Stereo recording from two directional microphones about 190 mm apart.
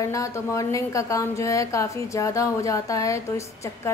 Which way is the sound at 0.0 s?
15° left (ahead or behind).